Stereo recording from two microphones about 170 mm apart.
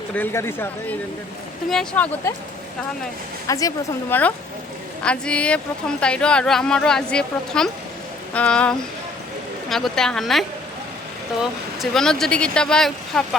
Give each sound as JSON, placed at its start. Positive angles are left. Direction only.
{"t": 0.1, "sound": "speech", "side_deg": 10}
{"t": 3.4, "sound": "speech", "side_deg": 20}
{"t": 4.1, "sound": "speech", "side_deg": 10}
{"t": 11.8, "sound": "speech", "side_deg": 0}